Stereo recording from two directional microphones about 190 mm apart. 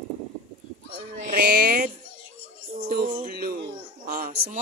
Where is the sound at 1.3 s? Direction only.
50° right (ahead or behind).